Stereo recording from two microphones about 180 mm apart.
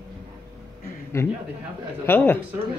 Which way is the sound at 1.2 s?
15° left (ahead or behind).